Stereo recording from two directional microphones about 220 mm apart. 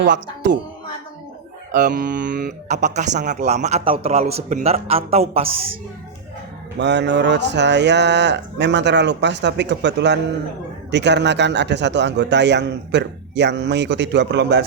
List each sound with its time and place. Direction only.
1.7 s speech: 40° right (ahead or behind)
6.7 s a man's voice: 50° right (ahead or behind)